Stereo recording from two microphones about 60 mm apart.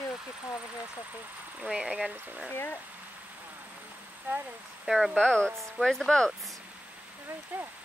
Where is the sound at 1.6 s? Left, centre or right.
Centre.